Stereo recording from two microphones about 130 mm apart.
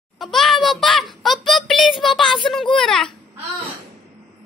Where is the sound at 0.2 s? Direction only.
Centre (ahead or behind).